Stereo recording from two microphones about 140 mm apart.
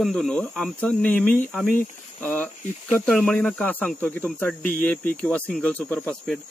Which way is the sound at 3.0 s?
5° left (ahead or behind).